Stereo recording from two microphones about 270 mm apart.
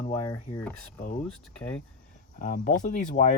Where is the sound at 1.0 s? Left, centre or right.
Left.